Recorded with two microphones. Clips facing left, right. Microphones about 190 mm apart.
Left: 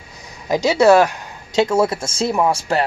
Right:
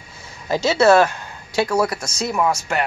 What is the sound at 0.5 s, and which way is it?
Speech, 15° left (ahead or behind).